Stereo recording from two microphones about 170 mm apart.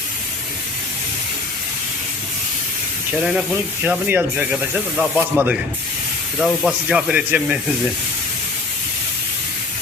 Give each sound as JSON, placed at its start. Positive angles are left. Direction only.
{"t": 3.3, "sound": "speech", "side_deg": -5}
{"t": 6.4, "sound": "speech", "side_deg": 5}
{"t": 6.8, "sound": "speech", "side_deg": -5}